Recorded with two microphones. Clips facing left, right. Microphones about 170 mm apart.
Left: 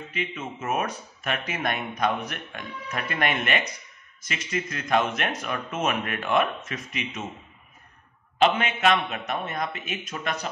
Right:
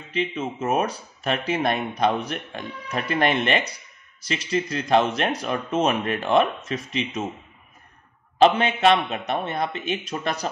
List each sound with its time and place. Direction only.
0.1 s speech: 30° right (ahead or behind)
8.4 s speech: 35° right (ahead or behind)